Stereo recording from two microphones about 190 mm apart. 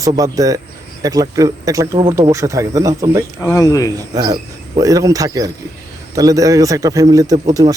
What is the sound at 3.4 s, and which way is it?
Speech, 15° left (ahead or behind).